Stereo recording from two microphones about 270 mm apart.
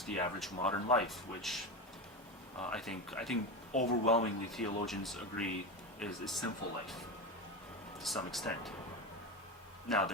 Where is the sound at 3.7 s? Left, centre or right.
Left.